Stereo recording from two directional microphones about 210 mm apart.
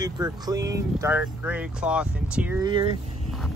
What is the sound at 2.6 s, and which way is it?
Speech, 20° right (ahead or behind).